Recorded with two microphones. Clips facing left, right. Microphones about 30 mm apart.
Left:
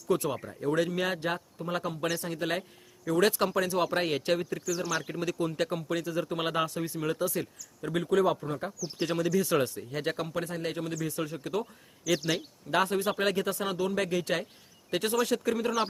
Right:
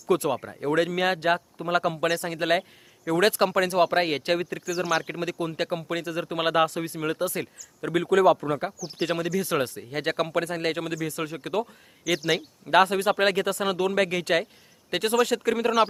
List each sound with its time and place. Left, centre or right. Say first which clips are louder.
0.1 s speech: right 5 dB; right
4.6 s speech: right 5 dB; right
8.4 s speech: right 6 dB; right
9.6 s speech: right 4 dB; right
12.1 s speech: right 4 dB; centre
12.7 s speech: right 7 dB; right